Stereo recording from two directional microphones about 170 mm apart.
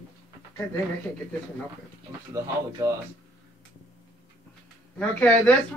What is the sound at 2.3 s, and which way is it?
Speech, 20° right (ahead or behind).